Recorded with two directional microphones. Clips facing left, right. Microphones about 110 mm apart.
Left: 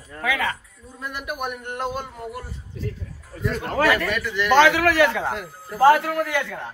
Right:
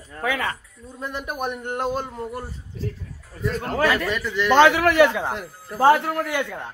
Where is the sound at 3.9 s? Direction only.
20° right (ahead or behind).